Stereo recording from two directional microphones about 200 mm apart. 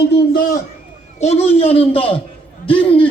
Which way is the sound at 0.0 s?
55° left (ahead or behind).